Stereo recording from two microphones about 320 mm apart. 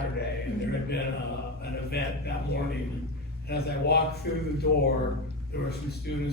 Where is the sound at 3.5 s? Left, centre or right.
Left.